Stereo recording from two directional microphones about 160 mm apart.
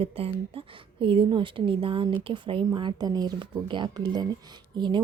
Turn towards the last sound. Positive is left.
turn(degrees=-30)  # may be behind; listen again after turning